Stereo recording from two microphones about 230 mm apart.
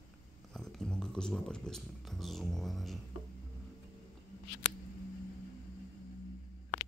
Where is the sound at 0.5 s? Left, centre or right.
Centre.